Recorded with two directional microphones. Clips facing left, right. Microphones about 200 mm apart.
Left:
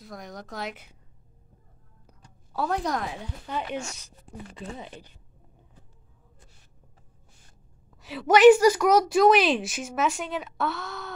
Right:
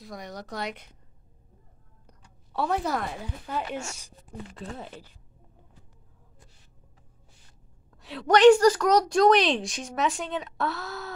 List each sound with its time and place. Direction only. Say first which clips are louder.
0.0 s a woman's voice: right 1 dB; centre (ahead or behind)
2.5 s a woman's voice: even; centre (ahead or behind)
7.9 s a woman's voice: left 1 dB; centre (ahead or behind)